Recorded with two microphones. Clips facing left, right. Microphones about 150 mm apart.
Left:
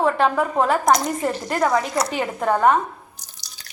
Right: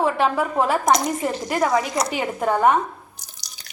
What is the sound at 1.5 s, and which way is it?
Speech, 20° right (ahead or behind).